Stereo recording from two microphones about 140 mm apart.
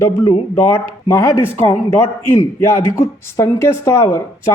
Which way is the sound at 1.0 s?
20° left (ahead or behind).